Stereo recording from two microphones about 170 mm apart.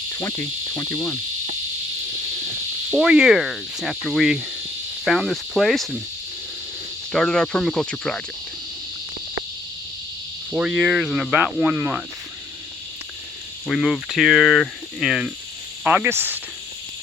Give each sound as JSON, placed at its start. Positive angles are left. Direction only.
{"t": 0.1, "sound": "insect", "side_deg": 15}
{"t": 2.9, "sound": "speech", "side_deg": -5}
{"t": 7.1, "sound": "speech", "side_deg": 5}
{"t": 10.5, "sound": "speech", "side_deg": -5}
{"t": 13.7, "sound": "speech", "side_deg": 0}